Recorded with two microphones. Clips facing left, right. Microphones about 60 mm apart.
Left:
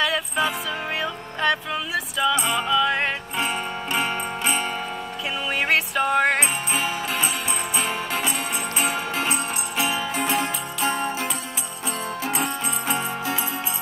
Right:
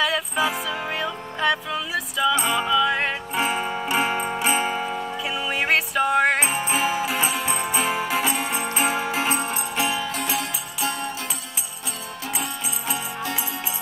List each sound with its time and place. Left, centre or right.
0.0 s music: centre
9.8 s music: centre
10.3 s music: centre
12.4 s music: left